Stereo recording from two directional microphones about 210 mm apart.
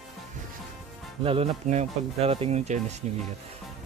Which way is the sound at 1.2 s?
30° right (ahead or behind).